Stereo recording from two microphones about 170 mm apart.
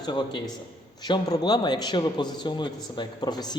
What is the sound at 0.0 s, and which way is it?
A man's voice, 25° left (ahead or behind).